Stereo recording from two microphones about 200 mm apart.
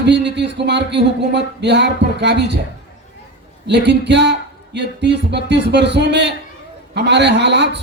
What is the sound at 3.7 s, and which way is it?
A man's voice, 60° right (ahead or behind).